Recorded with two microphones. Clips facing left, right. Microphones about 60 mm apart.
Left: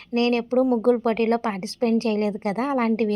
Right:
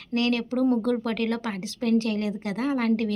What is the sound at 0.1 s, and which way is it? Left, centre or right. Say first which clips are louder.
A woman's voice: left 4 dB; left.